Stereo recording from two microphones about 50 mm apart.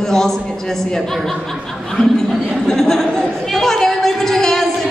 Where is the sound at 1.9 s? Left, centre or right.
Centre.